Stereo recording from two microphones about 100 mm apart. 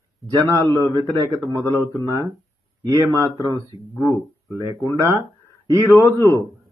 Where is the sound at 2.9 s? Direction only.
35° right (ahead or behind).